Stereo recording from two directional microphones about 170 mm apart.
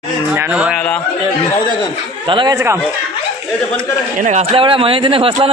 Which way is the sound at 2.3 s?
30° right (ahead or behind).